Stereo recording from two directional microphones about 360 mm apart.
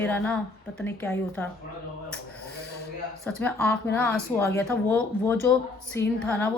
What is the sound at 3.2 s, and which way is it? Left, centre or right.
A woman's voice, centre.